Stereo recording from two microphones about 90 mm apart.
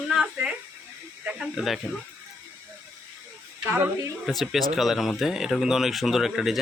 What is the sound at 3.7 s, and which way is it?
Speech, 20° right (ahead or behind).